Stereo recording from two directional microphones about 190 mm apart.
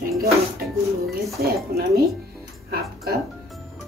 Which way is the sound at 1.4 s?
50° right (ahead or behind).